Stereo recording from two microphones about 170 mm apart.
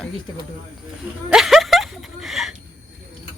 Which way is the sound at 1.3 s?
Centre (ahead or behind).